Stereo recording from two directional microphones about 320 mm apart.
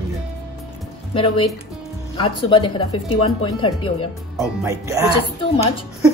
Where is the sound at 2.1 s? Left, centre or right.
Centre.